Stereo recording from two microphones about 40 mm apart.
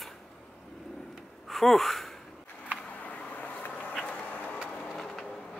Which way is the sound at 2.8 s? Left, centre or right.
Left.